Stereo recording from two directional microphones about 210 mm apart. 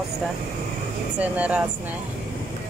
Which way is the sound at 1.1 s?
5° right (ahead or behind).